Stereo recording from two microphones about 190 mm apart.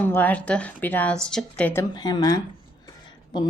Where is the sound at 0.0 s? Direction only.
10° left (ahead or behind).